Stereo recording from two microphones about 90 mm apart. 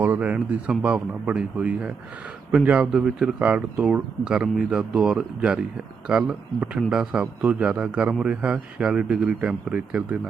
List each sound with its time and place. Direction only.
0.0 s speech: 20° right (ahead or behind)